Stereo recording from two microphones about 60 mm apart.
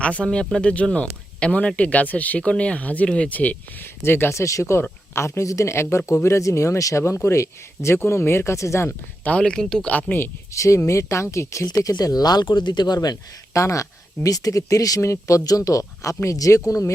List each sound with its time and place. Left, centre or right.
0.0 s speech: left
3.8 s speech: left
4.4 s speech: left
9.4 s speech: centre
9.9 s speech: left
10.5 s speech: left
13.0 s speech: left
14.3 s speech: left
15.0 s speech: left
15.4 s speech: left